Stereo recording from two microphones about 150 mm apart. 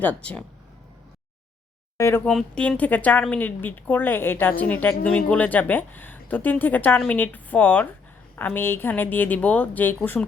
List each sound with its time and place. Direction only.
0.0 s speech: 10° left (ahead or behind)
2.0 s speech: 20° left (ahead or behind)
2.2 s speech: 5° left (ahead or behind)